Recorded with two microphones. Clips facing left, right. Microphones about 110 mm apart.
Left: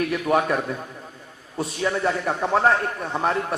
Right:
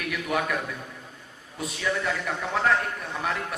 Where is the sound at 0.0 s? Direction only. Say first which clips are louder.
Left 7 dB; 35° left (ahead or behind).